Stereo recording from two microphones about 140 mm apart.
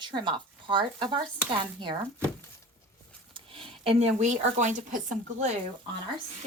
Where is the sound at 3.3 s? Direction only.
40° right (ahead or behind); by 5.5 s 60° right (ahead or behind).